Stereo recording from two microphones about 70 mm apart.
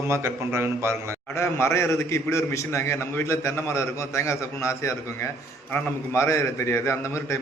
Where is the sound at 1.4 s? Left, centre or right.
Left.